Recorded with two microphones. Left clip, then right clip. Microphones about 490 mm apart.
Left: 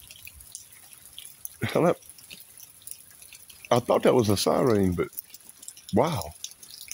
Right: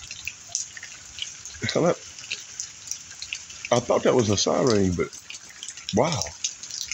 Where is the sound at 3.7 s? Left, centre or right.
Left.